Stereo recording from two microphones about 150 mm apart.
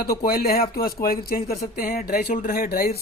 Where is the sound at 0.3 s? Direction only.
90° left.